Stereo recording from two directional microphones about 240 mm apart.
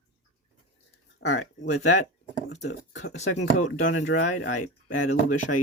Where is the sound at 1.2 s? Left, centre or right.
Left.